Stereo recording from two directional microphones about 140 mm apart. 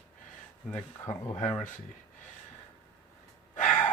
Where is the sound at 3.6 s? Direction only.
10° left (ahead or behind).